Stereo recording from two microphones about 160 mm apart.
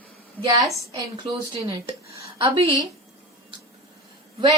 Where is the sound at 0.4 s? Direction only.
20° right (ahead or behind).